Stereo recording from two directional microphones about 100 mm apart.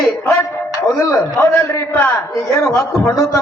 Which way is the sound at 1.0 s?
30° left (ahead or behind).